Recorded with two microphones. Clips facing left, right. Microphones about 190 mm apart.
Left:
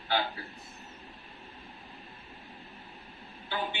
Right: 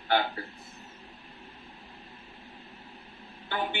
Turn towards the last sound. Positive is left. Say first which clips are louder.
# right 3 dB
turn(degrees=-55)  # may be behind; listen again after turning